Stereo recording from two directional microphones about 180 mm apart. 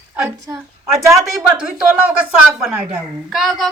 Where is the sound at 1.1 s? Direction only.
15° right (ahead or behind); by 3.7 s centre (ahead or behind).